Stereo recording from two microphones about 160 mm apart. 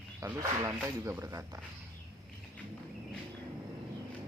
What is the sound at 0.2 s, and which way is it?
Speech, 20° right (ahead or behind).